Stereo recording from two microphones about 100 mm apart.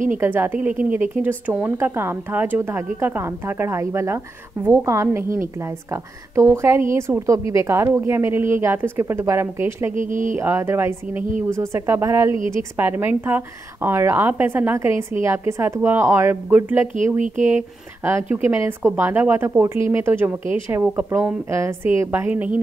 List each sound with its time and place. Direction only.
0.2 s speech: 20° right (ahead or behind)
18.0 s speech: 25° right (ahead or behind)
22.3 s a woman's voice: 15° right (ahead or behind)